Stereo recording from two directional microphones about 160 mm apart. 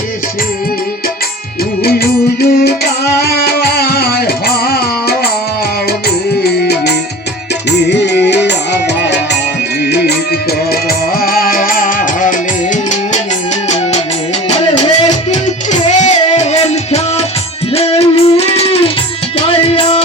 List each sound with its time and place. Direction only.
2.4 s music: 85° left
6.4 s music: 90° left
11.2 s music: 65° left (ahead or behind)
15.3 s music: 50° left (ahead or behind)